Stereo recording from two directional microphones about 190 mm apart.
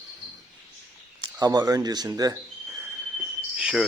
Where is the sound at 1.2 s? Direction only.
20° right (ahead or behind).